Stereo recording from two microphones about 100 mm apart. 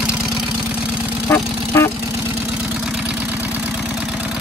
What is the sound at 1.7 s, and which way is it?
Vehicle, 25° left (ahead or behind).